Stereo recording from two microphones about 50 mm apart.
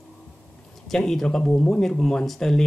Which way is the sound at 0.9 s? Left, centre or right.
Centre.